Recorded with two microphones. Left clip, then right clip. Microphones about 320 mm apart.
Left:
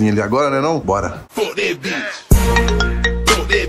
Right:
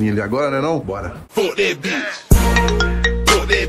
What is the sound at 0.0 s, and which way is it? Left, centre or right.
Speech, centre.